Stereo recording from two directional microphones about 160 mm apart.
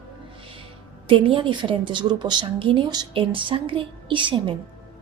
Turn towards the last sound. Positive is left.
turn(degrees=-30)  # may be behind; listen again after turning